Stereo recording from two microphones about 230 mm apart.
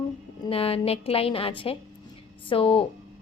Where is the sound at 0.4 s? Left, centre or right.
Left.